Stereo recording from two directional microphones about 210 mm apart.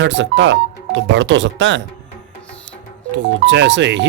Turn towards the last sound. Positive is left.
turn(degrees=-60)  # may be behind; listen again after turning